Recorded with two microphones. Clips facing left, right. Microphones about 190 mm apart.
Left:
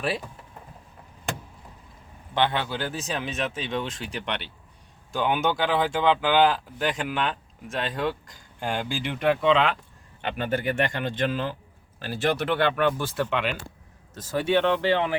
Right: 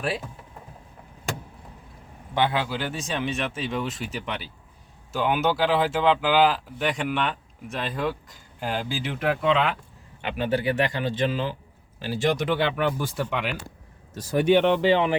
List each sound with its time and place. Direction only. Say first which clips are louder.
2.3 s speech: right 1 dB; 10° right (ahead or behind)
10.2 s speech: right 2 dB; 50° left (ahead or behind)
12.5 s speech: left 1 dB; 15° right (ahead or behind)